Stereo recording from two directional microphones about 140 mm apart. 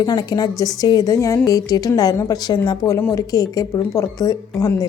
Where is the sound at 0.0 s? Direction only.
30° left (ahead or behind).